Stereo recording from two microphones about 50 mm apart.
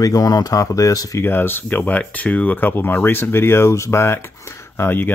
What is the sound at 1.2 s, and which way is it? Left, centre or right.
Speech, left.